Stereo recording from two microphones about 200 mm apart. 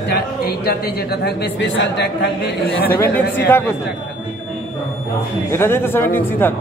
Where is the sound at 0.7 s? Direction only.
55° left (ahead or behind).